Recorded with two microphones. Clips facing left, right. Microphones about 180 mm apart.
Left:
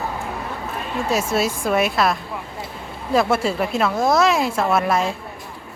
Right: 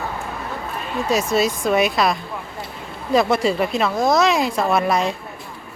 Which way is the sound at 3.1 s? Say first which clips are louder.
Right 1 dB; 5° left (ahead or behind).